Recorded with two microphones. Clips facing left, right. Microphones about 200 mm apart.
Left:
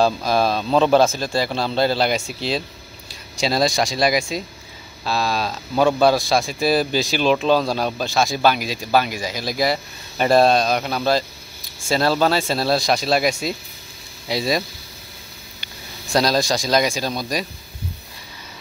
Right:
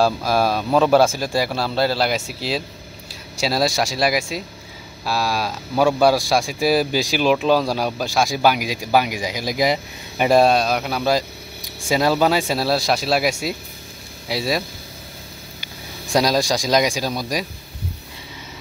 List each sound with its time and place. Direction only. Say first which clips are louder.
0.0 s speech: even; 10° right (ahead or behind)
15.6 s speech: right 2 dB; 15° right (ahead or behind)